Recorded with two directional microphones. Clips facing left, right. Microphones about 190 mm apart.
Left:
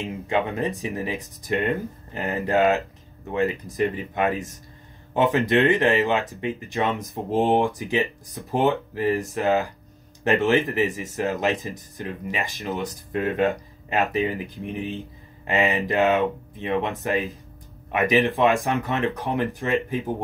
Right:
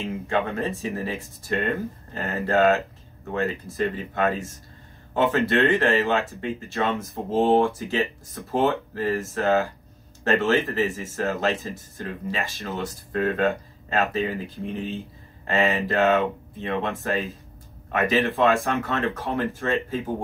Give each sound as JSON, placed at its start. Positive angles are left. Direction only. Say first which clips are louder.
{"t": 0.0, "sound": "speech", "louder": "left 1 dB", "side_deg": 15}